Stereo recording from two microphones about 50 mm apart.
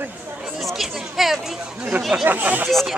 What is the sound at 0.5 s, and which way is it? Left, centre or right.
Speech, centre.